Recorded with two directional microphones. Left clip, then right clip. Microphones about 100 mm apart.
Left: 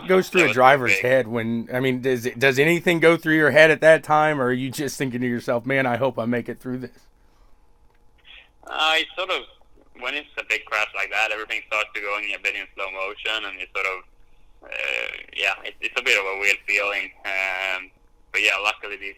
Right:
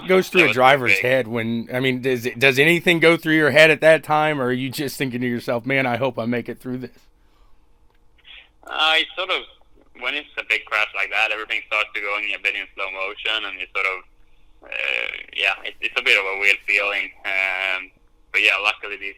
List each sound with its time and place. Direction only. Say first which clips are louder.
0.0 s speech: right 2 dB; 20° right (ahead or behind)
8.2 s a man's voice: right 2 dB; 5° right (ahead or behind)